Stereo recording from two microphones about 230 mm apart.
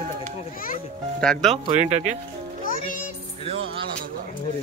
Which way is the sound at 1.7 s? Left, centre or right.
Right.